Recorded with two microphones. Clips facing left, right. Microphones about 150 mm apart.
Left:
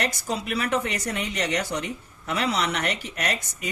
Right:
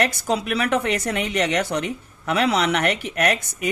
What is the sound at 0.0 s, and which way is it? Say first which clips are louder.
Speech: right 6 dB; 65° right (ahead or behind).